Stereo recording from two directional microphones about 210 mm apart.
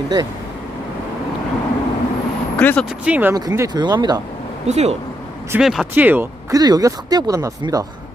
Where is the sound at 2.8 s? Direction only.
5° right (ahead or behind).